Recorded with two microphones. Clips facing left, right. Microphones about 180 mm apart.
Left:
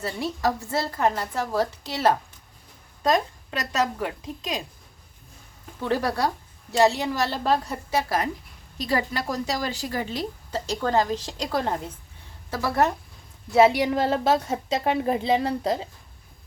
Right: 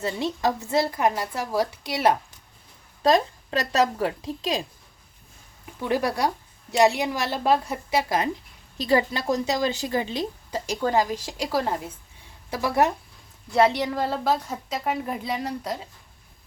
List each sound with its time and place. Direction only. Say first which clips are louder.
0.0 s a woman's voice: right 1 dB; 20° right (ahead or behind)
3.0 s a woman's voice: right 3 dB; 30° right (ahead or behind)
5.8 s a woman's voice: even; 15° right (ahead or behind)
13.5 s a woman's voice: left 3 dB; 5° left (ahead or behind); by 15.9 s 25° left (ahead or behind)